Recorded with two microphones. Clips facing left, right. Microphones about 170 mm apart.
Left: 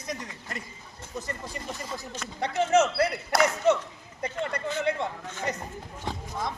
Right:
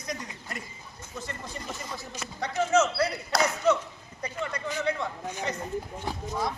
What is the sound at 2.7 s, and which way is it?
Speech, 55° left (ahead or behind).